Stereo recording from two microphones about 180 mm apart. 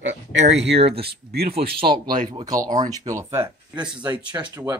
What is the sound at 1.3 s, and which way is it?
Speech, 60° right (ahead or behind).